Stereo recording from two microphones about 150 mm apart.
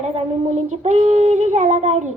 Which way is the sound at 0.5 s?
50° right (ahead or behind).